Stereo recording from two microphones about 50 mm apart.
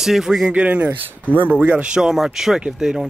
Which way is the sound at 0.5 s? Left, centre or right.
Right.